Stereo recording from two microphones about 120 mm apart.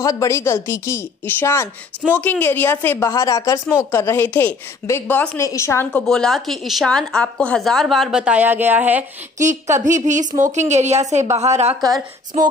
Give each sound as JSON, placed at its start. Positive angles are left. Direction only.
{"t": 0.0, "sound": "a woman's voice", "side_deg": 30}
{"t": 5.4, "sound": "a woman's voice", "side_deg": 25}
{"t": 6.0, "sound": "a woman's voice", "side_deg": 5}
{"t": 9.4, "sound": "a woman's voice", "side_deg": -90}